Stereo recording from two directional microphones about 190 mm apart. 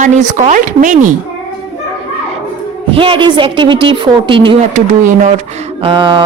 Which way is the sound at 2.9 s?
25° right (ahead or behind).